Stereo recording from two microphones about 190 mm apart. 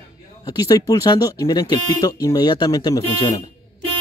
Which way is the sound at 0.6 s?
20° left (ahead or behind).